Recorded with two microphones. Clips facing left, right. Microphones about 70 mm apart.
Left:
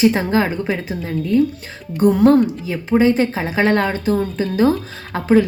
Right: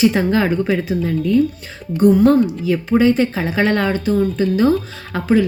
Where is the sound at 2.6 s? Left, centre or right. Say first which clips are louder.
Right 1 dB; left.